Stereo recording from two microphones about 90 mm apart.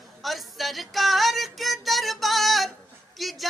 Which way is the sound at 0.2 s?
Centre (ahead or behind).